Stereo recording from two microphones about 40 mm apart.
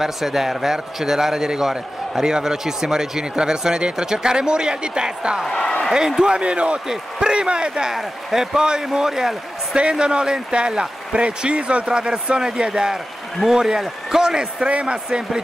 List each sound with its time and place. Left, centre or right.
0.0 s a man's voice: centre
5.5 s speech: centre
5.9 s a man's voice: centre
7.9 s a man's voice: centre
8.5 s a man's voice: centre
9.8 s a man's voice: right
12.9 s a man's voice: centre
14.7 s a man's voice: right
15.0 s a man's voice: right